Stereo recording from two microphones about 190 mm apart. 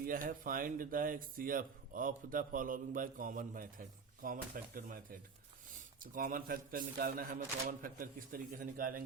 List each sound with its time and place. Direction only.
0.0 s speech: 45° right (ahead or behind)
6.0 s speech: 45° right (ahead or behind)